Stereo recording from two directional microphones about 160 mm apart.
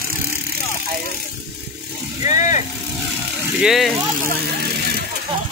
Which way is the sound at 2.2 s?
50° left (ahead or behind).